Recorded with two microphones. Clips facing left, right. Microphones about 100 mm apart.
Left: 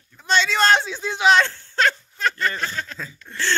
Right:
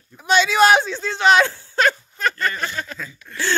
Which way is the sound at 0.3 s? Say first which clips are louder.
Right 4 dB; 5° right (ahead or behind).